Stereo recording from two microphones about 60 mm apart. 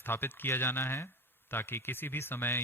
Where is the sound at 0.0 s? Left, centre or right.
Left.